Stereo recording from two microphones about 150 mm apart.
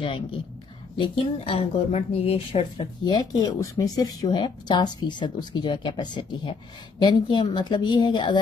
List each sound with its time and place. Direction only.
0.0 s speech: 35° left (ahead or behind)
3.0 s speech: 30° left (ahead or behind)